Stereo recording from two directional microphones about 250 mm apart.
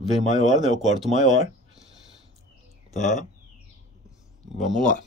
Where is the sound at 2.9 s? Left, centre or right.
Left.